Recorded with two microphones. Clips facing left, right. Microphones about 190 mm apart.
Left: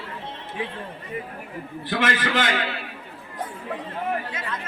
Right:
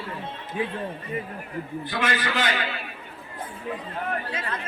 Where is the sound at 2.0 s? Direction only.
90° left.